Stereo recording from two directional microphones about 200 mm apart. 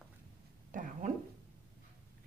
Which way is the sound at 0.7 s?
40° right (ahead or behind).